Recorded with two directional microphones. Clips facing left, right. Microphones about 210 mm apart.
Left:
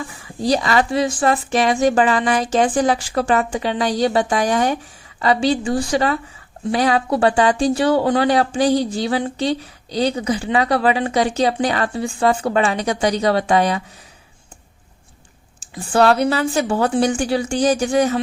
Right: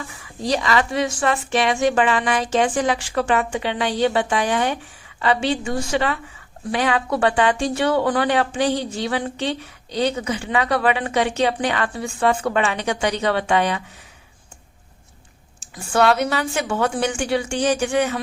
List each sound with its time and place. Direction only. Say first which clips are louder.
0.4 s speech: left 3 dB; 35° left (ahead or behind)
15.7 s speech: left 3 dB; 35° left (ahead or behind)